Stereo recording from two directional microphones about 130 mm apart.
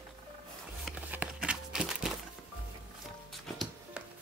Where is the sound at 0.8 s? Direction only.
10° right (ahead or behind).